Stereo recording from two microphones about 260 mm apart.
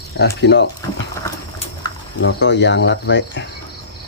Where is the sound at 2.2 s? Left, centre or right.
Left.